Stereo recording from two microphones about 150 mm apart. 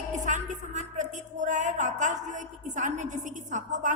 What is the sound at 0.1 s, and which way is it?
Speech, 55° right (ahead or behind).